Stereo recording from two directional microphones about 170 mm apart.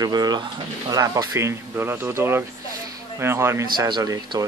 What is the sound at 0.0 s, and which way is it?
Speech, 25° right (ahead or behind).